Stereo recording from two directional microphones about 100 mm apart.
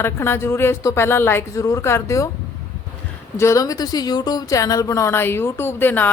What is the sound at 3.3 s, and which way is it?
A woman's voice, 30° left (ahead or behind).